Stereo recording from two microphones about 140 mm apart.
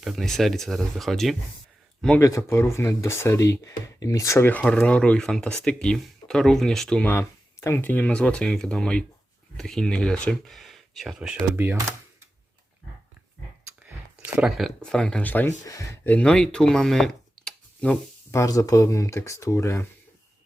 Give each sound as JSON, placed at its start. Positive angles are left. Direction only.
{"t": 0.0, "sound": "speech", "side_deg": 0}
{"t": 2.2, "sound": "speech", "side_deg": 20}
{"t": 11.5, "sound": "speech", "side_deg": -15}
{"t": 13.8, "sound": "speech", "side_deg": -10}
{"t": 15.6, "sound": "speech", "side_deg": 25}
{"t": 16.0, "sound": "speech", "side_deg": 5}
{"t": 18.3, "sound": "speech", "side_deg": 25}